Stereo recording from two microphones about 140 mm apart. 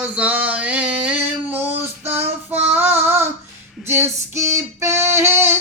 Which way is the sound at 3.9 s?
20° right (ahead or behind).